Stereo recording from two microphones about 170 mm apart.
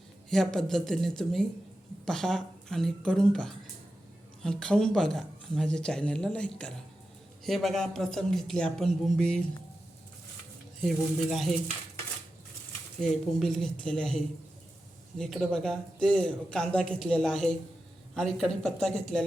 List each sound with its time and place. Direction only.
0.3 s a man's voice: centre (ahead or behind)
10.8 s a man's voice: centre (ahead or behind)
13.0 s a man's voice: centre (ahead or behind)
15.2 s a man's voice: centre (ahead or behind)